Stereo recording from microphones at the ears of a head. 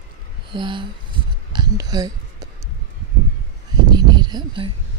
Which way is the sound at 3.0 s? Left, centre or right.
Right.